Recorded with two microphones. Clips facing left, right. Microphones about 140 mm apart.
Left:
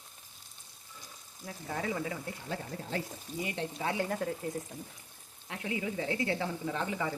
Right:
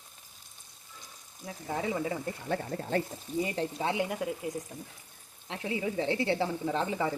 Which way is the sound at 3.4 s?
35° right (ahead or behind).